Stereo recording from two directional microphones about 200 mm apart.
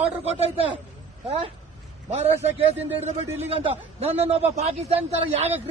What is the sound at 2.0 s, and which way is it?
A man's voice, 30° right (ahead or behind).